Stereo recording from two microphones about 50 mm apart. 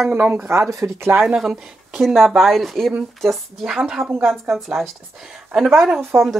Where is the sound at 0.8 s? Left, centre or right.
Right.